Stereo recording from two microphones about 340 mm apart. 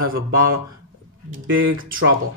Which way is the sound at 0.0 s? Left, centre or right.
Right.